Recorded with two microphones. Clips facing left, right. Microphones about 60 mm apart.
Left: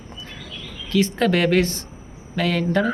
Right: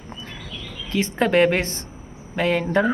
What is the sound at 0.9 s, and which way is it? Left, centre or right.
Speech, right.